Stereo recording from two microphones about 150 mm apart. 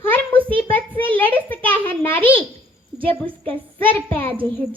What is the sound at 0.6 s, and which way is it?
A child's voice, 10° left (ahead or behind).